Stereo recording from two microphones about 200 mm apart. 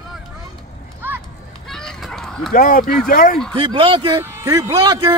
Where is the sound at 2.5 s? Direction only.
45° left (ahead or behind).